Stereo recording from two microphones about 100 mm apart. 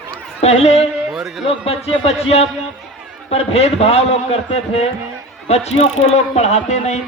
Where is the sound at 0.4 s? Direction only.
90° left.